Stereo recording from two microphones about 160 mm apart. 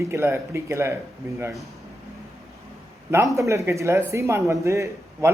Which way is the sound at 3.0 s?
20° right (ahead or behind).